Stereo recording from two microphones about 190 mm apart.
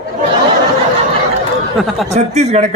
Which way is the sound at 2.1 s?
35° right (ahead or behind).